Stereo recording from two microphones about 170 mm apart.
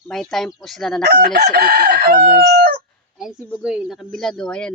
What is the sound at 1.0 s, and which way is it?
Chicken, 70° right (ahead or behind).